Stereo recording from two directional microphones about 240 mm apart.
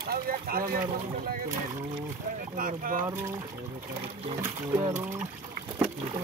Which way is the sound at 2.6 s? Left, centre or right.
Right.